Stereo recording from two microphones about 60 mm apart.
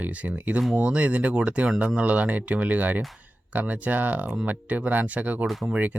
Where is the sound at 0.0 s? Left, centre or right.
Right.